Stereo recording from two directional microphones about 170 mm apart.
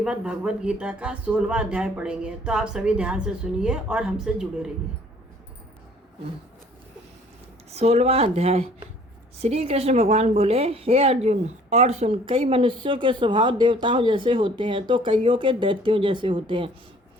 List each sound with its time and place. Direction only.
0.0 s speech: 5° right (ahead or behind)
7.7 s speech: 40° right (ahead or behind)